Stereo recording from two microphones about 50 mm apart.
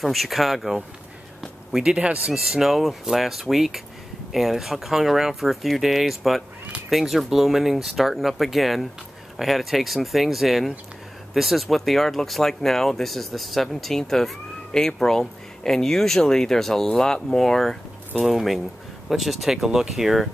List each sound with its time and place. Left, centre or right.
0.0 s speech: centre
1.9 s speech: centre